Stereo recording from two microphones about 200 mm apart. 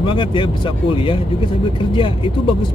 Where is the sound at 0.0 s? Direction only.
25° left (ahead or behind).